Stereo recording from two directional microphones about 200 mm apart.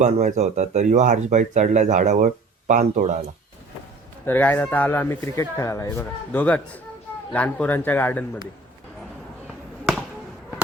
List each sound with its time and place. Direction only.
0.0 s speech: 35° right (ahead or behind)
4.3 s speech: 10° left (ahead or behind)